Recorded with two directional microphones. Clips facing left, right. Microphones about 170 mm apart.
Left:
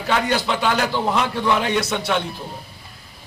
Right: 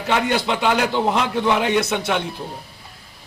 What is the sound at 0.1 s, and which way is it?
A man's voice, 20° right (ahead or behind).